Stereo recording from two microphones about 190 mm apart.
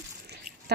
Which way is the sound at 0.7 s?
60° right (ahead or behind).